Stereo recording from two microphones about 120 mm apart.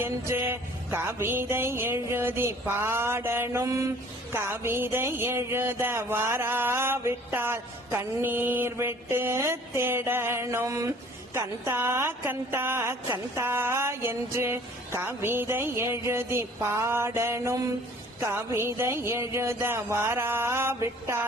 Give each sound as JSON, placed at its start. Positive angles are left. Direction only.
{"t": 0.0, "sound": "music", "side_deg": -20}